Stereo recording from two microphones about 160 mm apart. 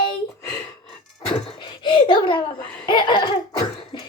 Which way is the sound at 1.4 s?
30° left (ahead or behind).